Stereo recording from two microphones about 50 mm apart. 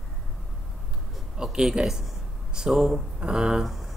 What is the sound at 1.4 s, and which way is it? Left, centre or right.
Speech, centre.